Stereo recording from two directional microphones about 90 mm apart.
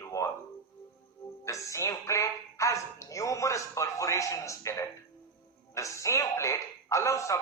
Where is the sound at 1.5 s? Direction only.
35° left (ahead or behind).